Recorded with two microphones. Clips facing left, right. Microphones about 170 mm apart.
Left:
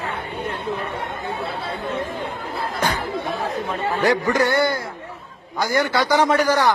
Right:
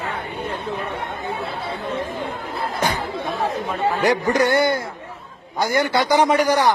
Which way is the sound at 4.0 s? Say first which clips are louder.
Even; 20° right (ahead or behind).